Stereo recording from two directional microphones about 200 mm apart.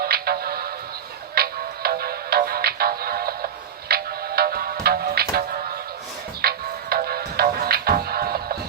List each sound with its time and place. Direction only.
0.0 s music: 50° right (ahead or behind)